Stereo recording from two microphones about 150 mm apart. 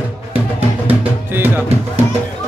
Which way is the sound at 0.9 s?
15° right (ahead or behind).